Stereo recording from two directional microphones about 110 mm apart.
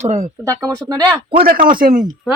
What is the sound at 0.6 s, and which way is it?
Speech, 30° right (ahead or behind).